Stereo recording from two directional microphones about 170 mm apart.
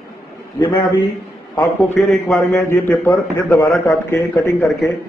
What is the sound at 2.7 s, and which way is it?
Speech, 15° left (ahead or behind).